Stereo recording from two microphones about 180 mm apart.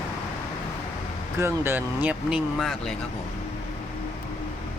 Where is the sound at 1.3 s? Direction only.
15° right (ahead or behind).